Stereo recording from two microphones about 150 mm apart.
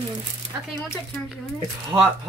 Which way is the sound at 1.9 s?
15° right (ahead or behind).